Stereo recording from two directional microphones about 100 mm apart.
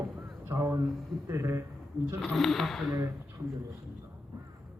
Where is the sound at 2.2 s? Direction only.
5° left (ahead or behind).